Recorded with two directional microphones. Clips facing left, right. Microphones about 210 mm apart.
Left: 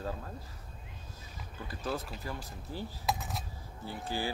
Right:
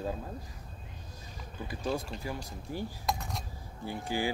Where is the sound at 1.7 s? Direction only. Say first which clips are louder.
Right 3 dB; 15° right (ahead or behind).